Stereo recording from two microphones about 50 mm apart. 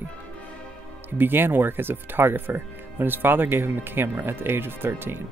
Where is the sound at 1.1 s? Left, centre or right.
Right.